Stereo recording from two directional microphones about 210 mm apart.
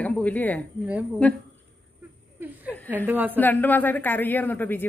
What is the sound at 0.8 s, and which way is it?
Speech, 5° right (ahead or behind).